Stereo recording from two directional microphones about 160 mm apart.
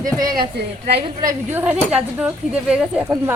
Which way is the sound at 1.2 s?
10° right (ahead or behind).